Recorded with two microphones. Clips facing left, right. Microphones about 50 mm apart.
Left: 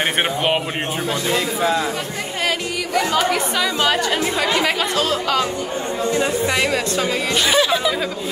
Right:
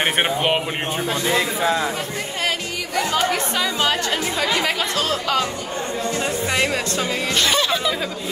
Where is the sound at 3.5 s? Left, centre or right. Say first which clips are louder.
Left 2 dB; centre.